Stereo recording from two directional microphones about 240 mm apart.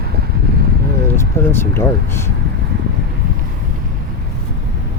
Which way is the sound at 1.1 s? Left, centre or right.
Centre.